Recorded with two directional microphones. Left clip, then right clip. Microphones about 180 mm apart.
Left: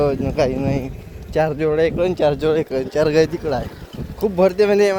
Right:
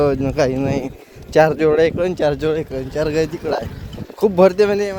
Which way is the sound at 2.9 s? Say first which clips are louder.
Left 3 dB; 20° left (ahead or behind).